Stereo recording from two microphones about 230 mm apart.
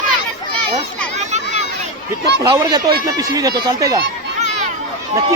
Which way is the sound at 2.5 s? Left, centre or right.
Centre.